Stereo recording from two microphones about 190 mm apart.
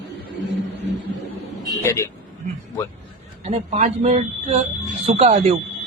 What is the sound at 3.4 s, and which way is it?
Speech, 35° right (ahead or behind).